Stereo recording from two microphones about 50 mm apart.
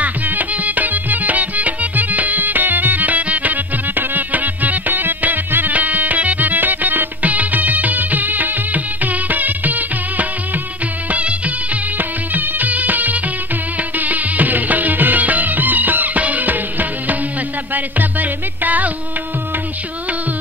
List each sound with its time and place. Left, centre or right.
0.0 s music: right
11.1 s music of bollywood: right
12.0 s music: right